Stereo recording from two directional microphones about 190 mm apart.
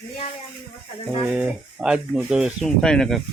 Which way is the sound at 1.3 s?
5° right (ahead or behind).